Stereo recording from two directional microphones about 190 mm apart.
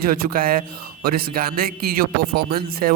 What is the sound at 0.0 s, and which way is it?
A man's voice, 50° right (ahead or behind).